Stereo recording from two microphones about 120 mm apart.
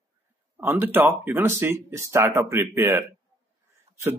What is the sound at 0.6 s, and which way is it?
Speech, 15° right (ahead or behind).